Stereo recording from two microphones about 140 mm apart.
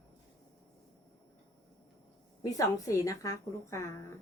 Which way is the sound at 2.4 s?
25° left (ahead or behind).